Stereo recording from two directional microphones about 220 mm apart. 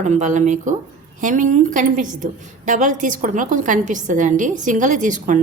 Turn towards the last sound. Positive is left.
turn(degrees=-35)  # may be behind; listen again after turning